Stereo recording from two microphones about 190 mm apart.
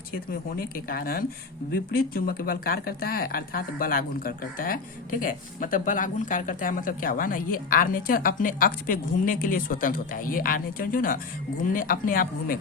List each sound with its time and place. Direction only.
0.5 s speech: 50° left (ahead or behind)